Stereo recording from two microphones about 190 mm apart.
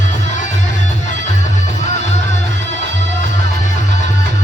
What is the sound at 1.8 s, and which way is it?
Music, 40° left (ahead or behind).